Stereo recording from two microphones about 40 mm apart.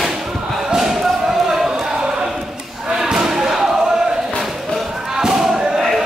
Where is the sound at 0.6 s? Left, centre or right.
Centre.